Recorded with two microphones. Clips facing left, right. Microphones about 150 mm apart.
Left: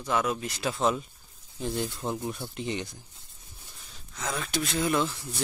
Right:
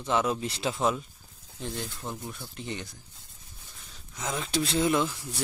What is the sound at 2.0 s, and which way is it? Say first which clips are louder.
Speech: left 6 dB; 20° left (ahead or behind).